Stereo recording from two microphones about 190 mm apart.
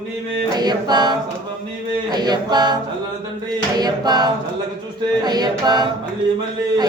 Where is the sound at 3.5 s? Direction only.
20° right (ahead or behind).